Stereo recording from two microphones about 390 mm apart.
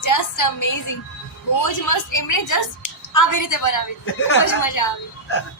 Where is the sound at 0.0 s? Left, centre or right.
Left.